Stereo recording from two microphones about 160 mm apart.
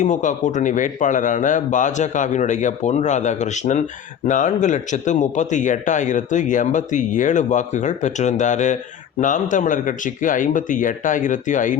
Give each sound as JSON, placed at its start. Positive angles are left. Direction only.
{"t": 0.0, "sound": "a man's voice", "side_deg": 50}